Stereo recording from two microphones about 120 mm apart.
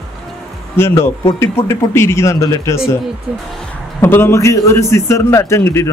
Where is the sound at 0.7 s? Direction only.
20° left (ahead or behind).